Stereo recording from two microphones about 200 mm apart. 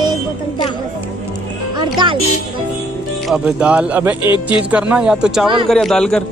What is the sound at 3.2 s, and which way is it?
Speech, 5° right (ahead or behind).